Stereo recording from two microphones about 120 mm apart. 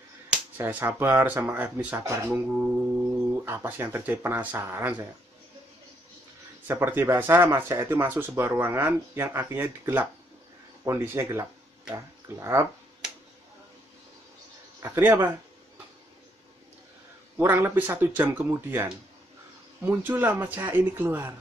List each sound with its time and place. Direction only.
0.3 s speech: 15° right (ahead or behind)
6.7 s speech: 20° right (ahead or behind)
14.8 s speech: 20° right (ahead or behind)
17.4 s speech: 20° right (ahead or behind)